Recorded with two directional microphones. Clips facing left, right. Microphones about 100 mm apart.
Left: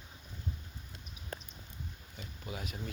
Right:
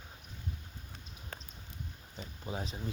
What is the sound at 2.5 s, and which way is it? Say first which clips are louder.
Speech: right 3 dB; 30° right (ahead or behind).